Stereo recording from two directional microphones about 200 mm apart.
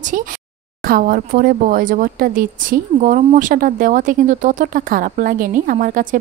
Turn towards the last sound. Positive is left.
turn(degrees=-40)  # may be behind; listen again after turning